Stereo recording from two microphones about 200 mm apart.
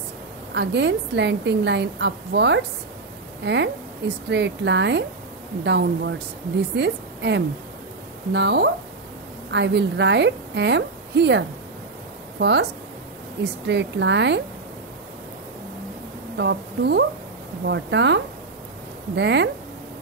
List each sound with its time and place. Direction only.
0.6 s a woman's voice: 60° right (ahead or behind)
16.3 s a woman's voice: 60° right (ahead or behind)